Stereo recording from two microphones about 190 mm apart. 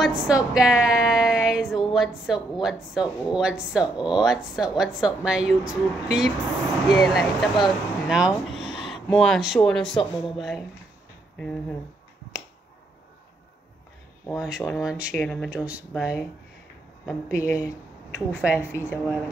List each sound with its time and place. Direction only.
0.0 s a woman's voice: 5° right (ahead or behind)
14.2 s a woman's voice: centre (ahead or behind)
17.3 s speech: 15° left (ahead or behind)
18.4 s speech: 5° right (ahead or behind)